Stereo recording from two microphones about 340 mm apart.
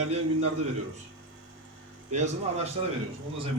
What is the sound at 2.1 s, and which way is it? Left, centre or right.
Speech, right.